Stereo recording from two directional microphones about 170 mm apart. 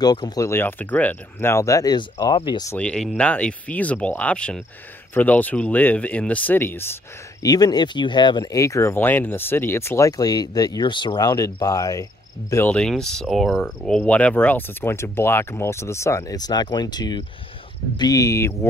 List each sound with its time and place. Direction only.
0.0 s speech: 25° left (ahead or behind)
2.7 s speech: 5° left (ahead or behind)
7.4 s speech: 25° left (ahead or behind)